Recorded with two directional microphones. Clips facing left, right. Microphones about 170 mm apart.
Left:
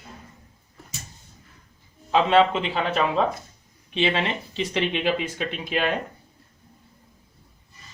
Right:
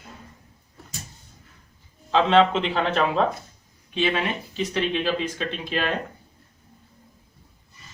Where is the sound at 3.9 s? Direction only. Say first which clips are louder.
Even; 25° left (ahead or behind).